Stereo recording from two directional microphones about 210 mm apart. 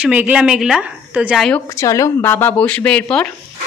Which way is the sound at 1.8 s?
15° left (ahead or behind).